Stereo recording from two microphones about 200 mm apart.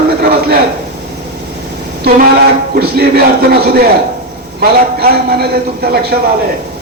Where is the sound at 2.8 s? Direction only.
50° right (ahead or behind).